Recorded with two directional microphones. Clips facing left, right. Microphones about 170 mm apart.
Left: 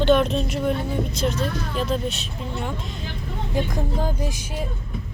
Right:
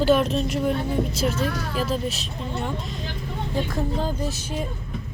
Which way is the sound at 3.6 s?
10° left (ahead or behind).